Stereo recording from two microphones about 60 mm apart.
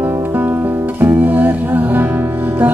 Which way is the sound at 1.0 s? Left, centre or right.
Right.